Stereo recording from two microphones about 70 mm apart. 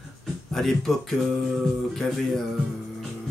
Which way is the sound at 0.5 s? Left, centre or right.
Centre.